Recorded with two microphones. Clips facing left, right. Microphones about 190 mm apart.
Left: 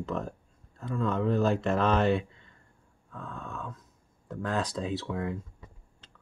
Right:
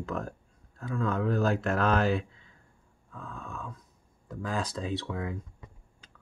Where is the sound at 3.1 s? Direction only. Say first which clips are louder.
Left 2 dB; 5° right (ahead or behind).